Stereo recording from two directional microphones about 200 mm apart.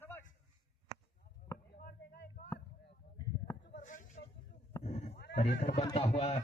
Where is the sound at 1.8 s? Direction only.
50° left (ahead or behind).